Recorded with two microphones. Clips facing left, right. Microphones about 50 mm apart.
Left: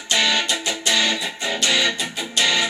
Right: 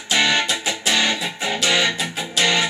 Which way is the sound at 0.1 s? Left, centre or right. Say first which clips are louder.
Right 1 dB; centre.